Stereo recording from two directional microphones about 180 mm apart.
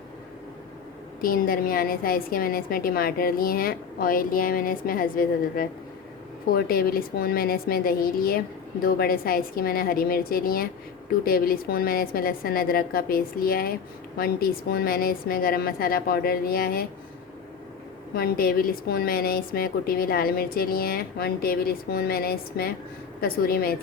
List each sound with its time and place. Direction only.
1.2 s a woman's voice: 55° left (ahead or behind)
18.1 s a woman's voice: 55° left (ahead or behind)